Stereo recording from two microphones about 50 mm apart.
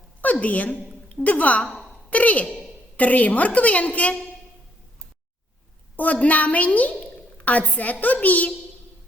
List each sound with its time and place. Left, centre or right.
0.2 s a woman's voice: left
6.0 s a woman's voice: left